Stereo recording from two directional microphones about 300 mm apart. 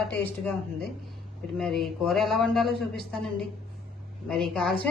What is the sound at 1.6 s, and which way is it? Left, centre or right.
A woman's voice, centre.